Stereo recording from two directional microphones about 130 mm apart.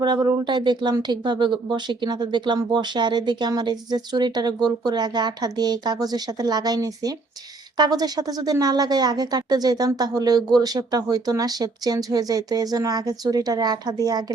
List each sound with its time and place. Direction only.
0.0 s speech: 35° right (ahead or behind)